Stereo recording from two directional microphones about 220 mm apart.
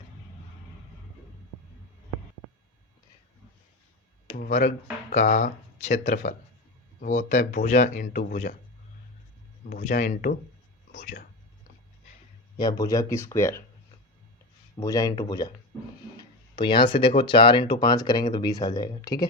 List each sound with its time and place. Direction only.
4.4 s speech: 35° left (ahead or behind)
9.6 s speech: 35° left (ahead or behind)
12.5 s speech: 20° left (ahead or behind)
14.8 s speech: 15° left (ahead or behind)